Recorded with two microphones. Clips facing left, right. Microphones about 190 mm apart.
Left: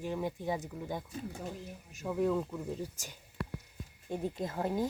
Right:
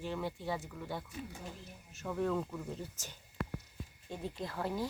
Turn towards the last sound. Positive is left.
turn(degrees=20)  # may be behind; listen again after turning